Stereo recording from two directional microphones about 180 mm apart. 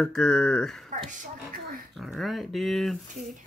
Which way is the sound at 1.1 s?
45° right (ahead or behind).